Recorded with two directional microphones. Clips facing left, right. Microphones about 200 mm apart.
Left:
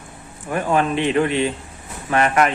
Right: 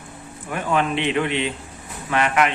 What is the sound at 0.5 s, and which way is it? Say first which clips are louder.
Speech: left 3 dB; 40° left (ahead or behind).